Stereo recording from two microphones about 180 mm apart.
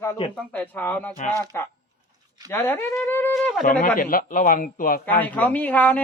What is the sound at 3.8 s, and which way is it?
A man's voice, 50° left (ahead or behind).